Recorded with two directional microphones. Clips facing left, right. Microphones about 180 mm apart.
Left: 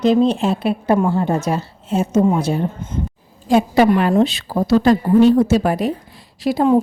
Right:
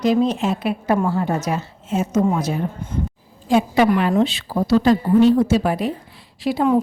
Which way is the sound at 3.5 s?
40° left (ahead or behind).